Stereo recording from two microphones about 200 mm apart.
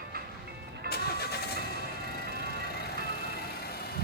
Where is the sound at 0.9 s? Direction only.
50° left (ahead or behind).